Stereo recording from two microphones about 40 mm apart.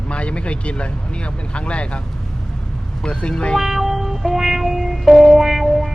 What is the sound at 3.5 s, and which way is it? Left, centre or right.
Music, centre.